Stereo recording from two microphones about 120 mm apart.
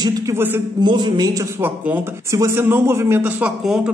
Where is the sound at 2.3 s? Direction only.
25° right (ahead or behind); by 3.9 s 5° right (ahead or behind).